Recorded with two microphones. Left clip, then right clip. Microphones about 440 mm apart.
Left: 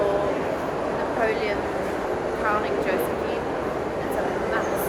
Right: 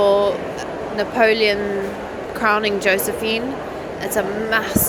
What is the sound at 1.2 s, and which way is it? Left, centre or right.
Speech, right.